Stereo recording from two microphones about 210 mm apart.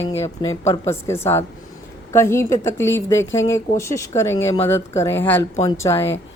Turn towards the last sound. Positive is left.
turn(degrees=15)  # may be behind; listen again after turning